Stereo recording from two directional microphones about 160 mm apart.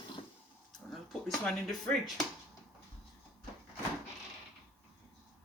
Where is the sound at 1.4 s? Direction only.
5° left (ahead or behind).